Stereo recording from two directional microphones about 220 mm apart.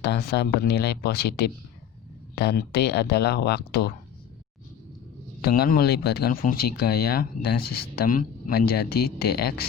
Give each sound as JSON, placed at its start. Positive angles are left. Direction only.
{"t": 0.0, "sound": "speech", "side_deg": 50}
{"t": 5.4, "sound": "speech", "side_deg": 45}